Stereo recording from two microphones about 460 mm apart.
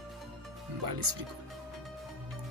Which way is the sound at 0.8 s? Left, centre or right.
Right.